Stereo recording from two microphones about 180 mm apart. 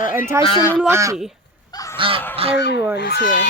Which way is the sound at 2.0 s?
30° right (ahead or behind).